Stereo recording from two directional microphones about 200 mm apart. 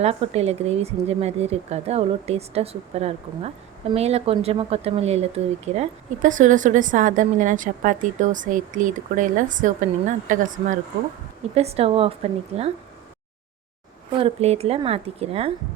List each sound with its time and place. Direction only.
0.0 s speech: 30° right (ahead or behind)
14.2 s a woman's voice: 30° right (ahead or behind)